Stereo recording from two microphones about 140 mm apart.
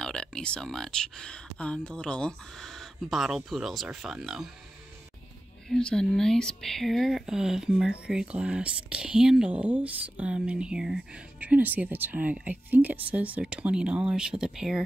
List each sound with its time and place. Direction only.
0.0 s speech: 5° left (ahead or behind)
5.7 s speech: 5° left (ahead or behind)